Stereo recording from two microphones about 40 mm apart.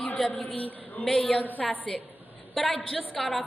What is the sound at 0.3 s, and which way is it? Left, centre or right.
Speech, left.